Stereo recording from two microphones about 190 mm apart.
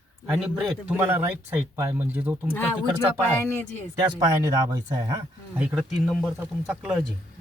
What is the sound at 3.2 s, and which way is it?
Speech, 10° left (ahead or behind).